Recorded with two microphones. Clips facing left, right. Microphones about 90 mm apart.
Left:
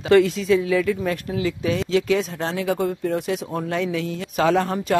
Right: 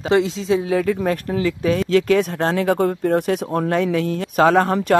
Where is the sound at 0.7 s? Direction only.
40° right (ahead or behind).